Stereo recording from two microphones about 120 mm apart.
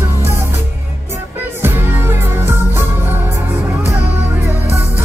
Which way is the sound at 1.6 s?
20° right (ahead or behind).